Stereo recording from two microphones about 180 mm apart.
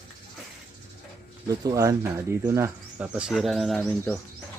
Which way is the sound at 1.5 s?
20° right (ahead or behind).